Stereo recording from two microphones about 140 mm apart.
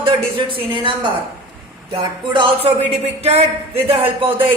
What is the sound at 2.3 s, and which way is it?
Speech, 35° right (ahead or behind).